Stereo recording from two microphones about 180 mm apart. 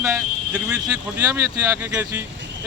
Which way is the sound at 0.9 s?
15° right (ahead or behind).